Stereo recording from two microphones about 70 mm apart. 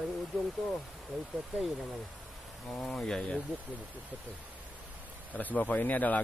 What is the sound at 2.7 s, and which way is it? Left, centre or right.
Speech, centre.